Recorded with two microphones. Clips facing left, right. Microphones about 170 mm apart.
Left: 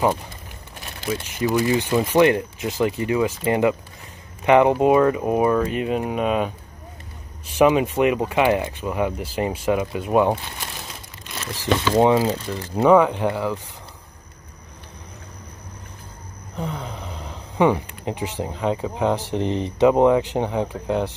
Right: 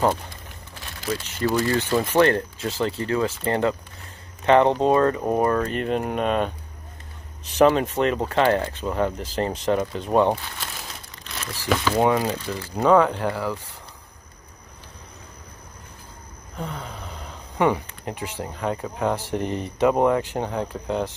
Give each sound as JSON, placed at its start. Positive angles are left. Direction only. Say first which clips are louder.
{"t": 1.2, "sound": "speech", "louder": "left 2 dB", "side_deg": 15}
{"t": 11.8, "sound": "speech", "louder": "left 4 dB", "side_deg": 20}
{"t": 16.5, "sound": "speech", "louder": "left 3 dB", "side_deg": 20}